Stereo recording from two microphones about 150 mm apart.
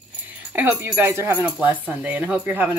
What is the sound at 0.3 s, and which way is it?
Speech, 10° right (ahead or behind).